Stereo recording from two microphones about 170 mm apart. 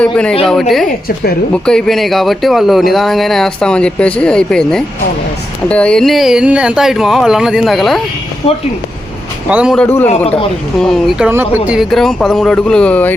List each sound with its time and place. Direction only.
0.0 s speech: 5° left (ahead or behind)
0.9 s a woman's voice: 65° left (ahead or behind)
1.6 s speech: 5° left (ahead or behind)
9.5 s speech: 10° right (ahead or behind)
9.7 s a man's voice: 10° left (ahead or behind)
10.1 s a man's voice: 35° left (ahead or behind)
10.8 s speech: 5° left (ahead or behind)
11.3 s speech: 10° right (ahead or behind); by 13.1 s 10° left (ahead or behind)